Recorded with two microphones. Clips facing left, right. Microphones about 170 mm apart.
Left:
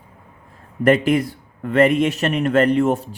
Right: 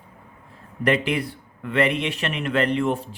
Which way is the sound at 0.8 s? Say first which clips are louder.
Left 6 dB; 45° left (ahead or behind).